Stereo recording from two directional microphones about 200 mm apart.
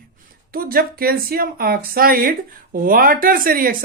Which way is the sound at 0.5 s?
45° right (ahead or behind).